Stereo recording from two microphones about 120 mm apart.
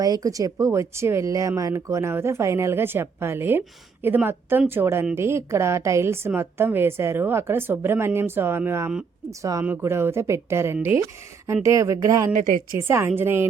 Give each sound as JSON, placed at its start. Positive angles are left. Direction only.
{"t": 0.0, "sound": "a woman's voice", "side_deg": -30}